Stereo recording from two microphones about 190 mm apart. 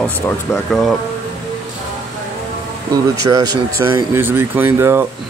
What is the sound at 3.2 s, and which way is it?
Speech, 20° right (ahead or behind).